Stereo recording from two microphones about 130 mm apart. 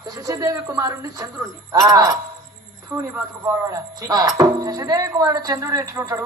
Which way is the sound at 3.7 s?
30° right (ahead or behind).